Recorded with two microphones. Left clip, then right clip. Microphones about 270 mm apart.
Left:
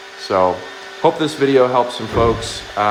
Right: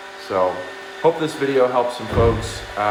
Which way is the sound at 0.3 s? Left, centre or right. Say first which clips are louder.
Left 4 dB; left.